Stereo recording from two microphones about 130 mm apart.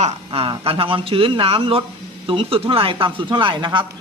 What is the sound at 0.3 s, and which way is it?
Speech, 40° right (ahead or behind).